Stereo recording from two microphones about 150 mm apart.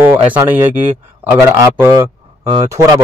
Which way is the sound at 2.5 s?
30° right (ahead or behind).